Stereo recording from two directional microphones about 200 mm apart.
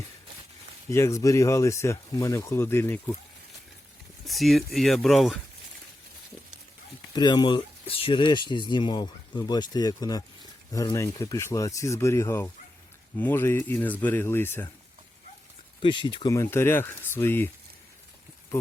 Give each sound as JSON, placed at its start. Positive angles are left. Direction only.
{"t": 0.9, "sound": "speech", "side_deg": 15}
{"t": 4.3, "sound": "speech", "side_deg": 0}
{"t": 7.1, "sound": "speech", "side_deg": 20}
{"t": 15.8, "sound": "speech", "side_deg": 25}